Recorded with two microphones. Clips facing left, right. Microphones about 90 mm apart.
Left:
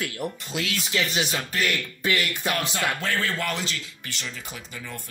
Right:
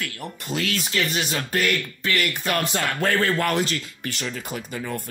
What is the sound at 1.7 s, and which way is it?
Speech, 15° left (ahead or behind).